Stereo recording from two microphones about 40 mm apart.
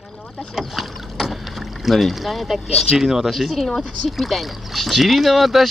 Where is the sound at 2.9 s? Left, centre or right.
Centre.